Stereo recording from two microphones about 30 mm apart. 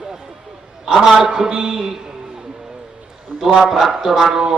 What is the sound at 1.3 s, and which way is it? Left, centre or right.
Speech, right.